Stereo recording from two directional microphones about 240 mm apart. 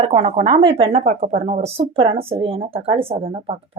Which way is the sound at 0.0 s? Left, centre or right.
Right.